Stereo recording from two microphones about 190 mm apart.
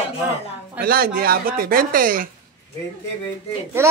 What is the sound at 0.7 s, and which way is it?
Speech, 50° right (ahead or behind).